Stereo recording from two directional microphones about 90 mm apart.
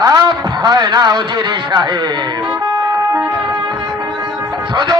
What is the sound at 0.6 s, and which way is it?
Speech, 55° right (ahead or behind).